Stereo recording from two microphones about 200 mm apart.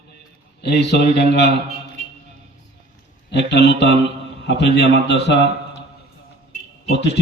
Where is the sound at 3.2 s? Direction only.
60° left (ahead or behind).